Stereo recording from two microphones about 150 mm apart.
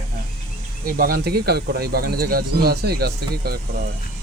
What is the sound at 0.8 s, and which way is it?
Speech, 75° right (ahead or behind).